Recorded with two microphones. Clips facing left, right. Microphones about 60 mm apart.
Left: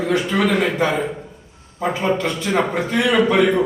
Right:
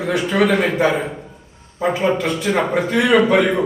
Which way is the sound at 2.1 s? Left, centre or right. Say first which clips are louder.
Right 1 dB; centre.